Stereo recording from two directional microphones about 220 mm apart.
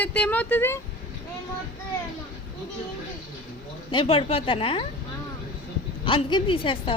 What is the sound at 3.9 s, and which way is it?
Speech, 25° left (ahead or behind).